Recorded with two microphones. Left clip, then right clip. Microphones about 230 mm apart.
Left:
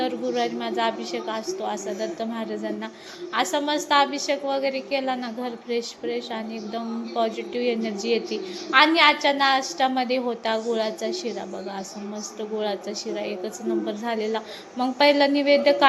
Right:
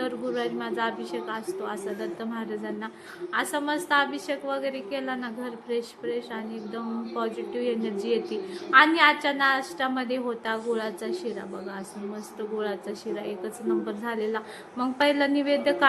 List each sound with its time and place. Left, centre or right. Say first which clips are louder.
0.0 s a woman's voice: left 4 dB; centre
3.3 s a woman's voice: left 4 dB; centre
12.4 s a woman's voice: left 3 dB; centre